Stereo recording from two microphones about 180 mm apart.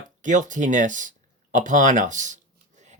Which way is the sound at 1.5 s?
45° right (ahead or behind).